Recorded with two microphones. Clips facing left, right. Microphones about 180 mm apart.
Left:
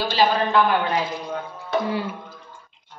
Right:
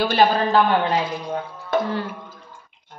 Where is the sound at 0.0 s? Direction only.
55° right (ahead or behind).